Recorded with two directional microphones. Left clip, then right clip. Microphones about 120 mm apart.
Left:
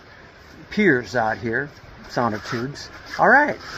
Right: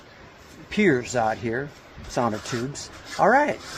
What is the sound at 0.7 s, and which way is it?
Speech, 25° right (ahead or behind).